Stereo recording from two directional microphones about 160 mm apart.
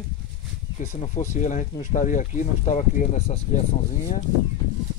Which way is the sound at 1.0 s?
50° left (ahead or behind).